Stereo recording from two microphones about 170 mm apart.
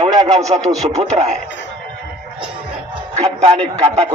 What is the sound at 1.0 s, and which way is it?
Speech, 40° right (ahead or behind).